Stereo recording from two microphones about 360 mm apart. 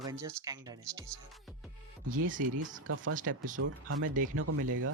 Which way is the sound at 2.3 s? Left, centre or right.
Right.